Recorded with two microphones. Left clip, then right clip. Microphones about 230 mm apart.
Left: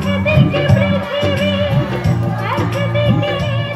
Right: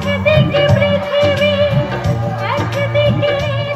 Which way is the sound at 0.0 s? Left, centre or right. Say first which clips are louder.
Right 3 dB; right.